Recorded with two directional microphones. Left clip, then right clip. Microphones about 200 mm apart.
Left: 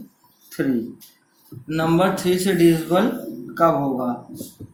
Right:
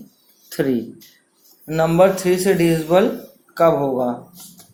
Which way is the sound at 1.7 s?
25° right (ahead or behind).